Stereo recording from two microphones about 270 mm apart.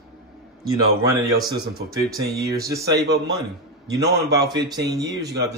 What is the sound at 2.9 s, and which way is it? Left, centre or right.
Speech, right.